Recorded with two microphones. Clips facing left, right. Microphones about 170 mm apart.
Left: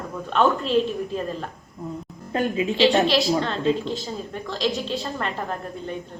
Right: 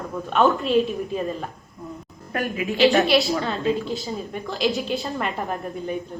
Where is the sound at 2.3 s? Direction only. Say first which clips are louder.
Left 2 dB; 25° left (ahead or behind).